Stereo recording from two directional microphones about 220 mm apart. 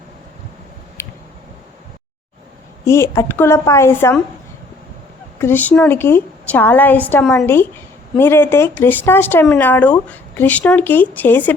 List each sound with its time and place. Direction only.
1.0 s a sound: 10° left (ahead or behind)
2.8 s speech: 10° left (ahead or behind)
5.4 s speech: 10° left (ahead or behind)